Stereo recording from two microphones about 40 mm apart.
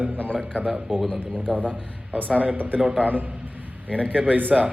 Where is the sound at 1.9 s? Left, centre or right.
Right.